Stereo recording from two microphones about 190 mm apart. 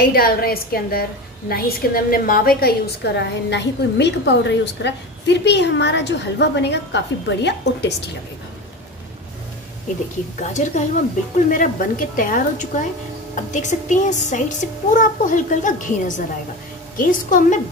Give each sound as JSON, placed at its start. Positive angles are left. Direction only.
{"t": 0.0, "sound": "a woman's voice", "side_deg": 50}
{"t": 10.4, "sound": "a woman's voice", "side_deg": 40}